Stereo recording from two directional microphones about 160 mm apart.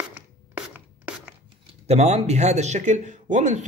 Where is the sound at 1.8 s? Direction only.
45° right (ahead or behind).